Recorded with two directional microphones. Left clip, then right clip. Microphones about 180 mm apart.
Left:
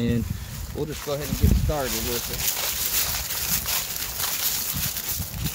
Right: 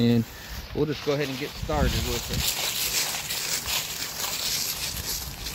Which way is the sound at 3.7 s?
5° left (ahead or behind).